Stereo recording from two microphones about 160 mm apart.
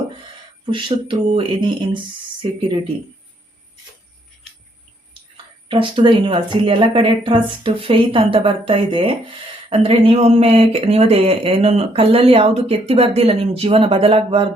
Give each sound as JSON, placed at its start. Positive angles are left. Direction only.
{"t": 0.6, "sound": "speech", "side_deg": -30}
{"t": 5.6, "sound": "speech", "side_deg": -30}